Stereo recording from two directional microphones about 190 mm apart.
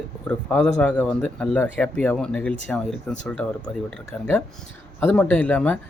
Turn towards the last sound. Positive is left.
turn(degrees=10)  # may be behind; listen again after turning